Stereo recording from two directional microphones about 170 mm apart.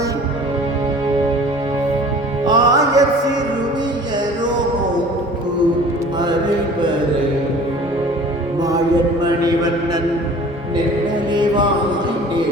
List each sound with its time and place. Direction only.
2.4 s music: 25° right (ahead or behind)
11.3 s chant: 25° right (ahead or behind)